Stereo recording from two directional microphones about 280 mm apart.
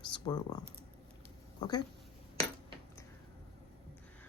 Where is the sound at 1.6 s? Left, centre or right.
Centre.